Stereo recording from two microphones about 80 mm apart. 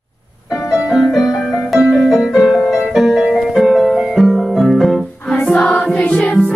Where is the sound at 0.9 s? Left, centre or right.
Centre.